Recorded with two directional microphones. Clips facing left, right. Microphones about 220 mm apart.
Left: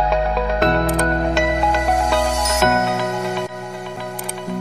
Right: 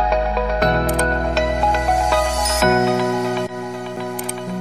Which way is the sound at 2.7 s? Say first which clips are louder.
Right 3 dB; centre (ahead or behind).